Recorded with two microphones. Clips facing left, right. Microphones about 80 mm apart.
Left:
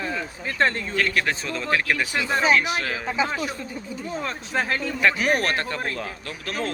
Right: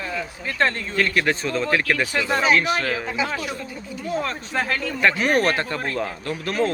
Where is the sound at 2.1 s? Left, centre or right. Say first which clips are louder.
Right 2 dB; centre.